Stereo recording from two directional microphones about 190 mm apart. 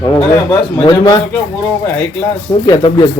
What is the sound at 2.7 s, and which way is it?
Speech, 25° left (ahead or behind).